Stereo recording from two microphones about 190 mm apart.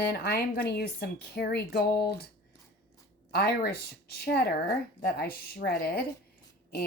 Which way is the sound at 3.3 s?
55° left (ahead or behind).